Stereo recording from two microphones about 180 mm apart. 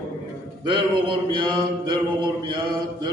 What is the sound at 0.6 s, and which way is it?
Mantra, 25° right (ahead or behind).